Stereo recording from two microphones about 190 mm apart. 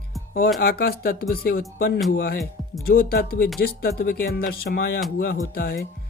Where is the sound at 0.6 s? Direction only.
50° left (ahead or behind).